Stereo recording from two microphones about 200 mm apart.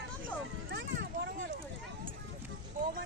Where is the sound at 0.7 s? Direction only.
60° right (ahead or behind).